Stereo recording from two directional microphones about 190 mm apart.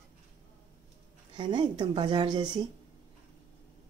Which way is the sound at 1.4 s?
25° right (ahead or behind).